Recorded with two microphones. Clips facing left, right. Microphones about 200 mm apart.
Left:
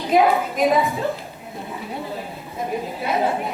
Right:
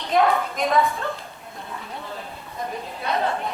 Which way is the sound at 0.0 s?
5° left (ahead or behind).